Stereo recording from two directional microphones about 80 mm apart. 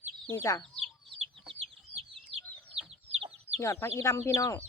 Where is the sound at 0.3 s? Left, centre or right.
Left.